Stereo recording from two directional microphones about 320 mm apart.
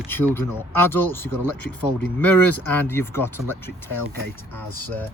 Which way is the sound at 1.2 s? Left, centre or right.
Left.